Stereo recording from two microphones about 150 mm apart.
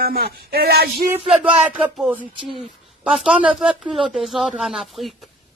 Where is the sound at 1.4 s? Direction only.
10° right (ahead or behind).